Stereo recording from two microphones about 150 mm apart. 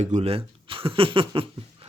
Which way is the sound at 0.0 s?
45° right (ahead or behind).